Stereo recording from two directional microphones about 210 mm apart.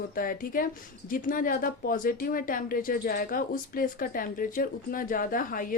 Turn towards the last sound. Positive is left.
turn(degrees=40)  # may be behind; listen again after turning